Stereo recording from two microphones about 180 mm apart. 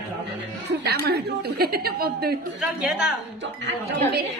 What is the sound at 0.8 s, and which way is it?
A woman's voice, 60° right (ahead or behind).